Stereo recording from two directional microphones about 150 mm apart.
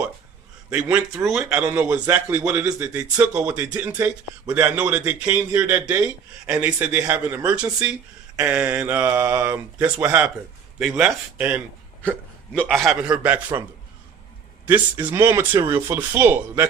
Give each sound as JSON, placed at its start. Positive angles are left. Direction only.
{"t": 0.7, "sound": "speech", "side_deg": -10}
{"t": 2.6, "sound": "speech", "side_deg": -20}
{"t": 2.9, "sound": "a man's voice", "side_deg": -10}
{"t": 12.6, "sound": "a man's voice", "side_deg": 0}
{"t": 14.7, "sound": "speech", "side_deg": -15}